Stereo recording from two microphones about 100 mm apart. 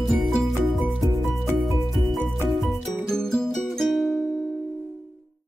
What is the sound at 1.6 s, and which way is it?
Music, centre (ahead or behind).